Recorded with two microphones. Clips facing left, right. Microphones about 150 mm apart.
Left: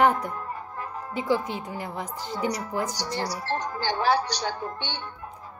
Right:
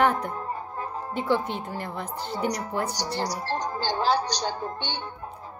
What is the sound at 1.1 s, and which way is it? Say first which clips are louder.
Speech: even; 10° left (ahead or behind).